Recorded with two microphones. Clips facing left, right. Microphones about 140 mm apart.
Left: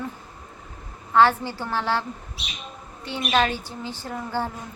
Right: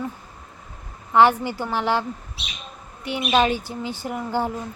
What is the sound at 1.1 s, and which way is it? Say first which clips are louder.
Speech: right 2 dB; 15° right (ahead or behind).